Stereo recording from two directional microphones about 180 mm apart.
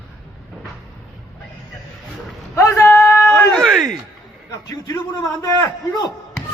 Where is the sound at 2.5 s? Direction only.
15° left (ahead or behind).